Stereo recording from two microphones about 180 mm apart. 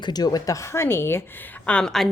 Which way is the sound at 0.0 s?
20° left (ahead or behind).